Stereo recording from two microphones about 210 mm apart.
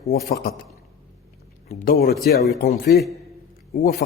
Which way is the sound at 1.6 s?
35° left (ahead or behind).